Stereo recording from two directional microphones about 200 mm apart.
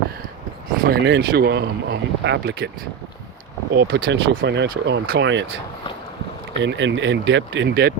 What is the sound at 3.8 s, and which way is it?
Speech, 75° right (ahead or behind).